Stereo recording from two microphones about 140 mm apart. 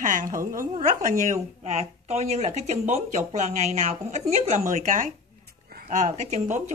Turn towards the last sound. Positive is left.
turn(degrees=-60)  # may be behind; listen again after turning